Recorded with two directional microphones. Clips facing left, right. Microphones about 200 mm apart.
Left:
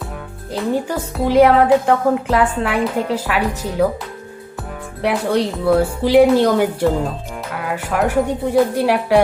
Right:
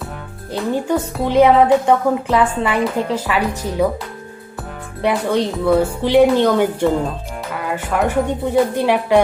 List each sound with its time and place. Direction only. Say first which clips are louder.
0.5 s a woman's voice: right 1 dB; centre (ahead or behind)
5.0 s a woman's voice: even; 5° left (ahead or behind)